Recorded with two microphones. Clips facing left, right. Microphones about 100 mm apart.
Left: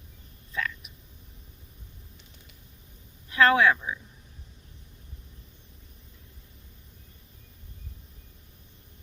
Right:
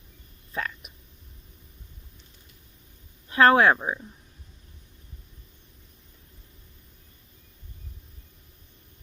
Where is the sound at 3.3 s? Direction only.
35° right (ahead or behind).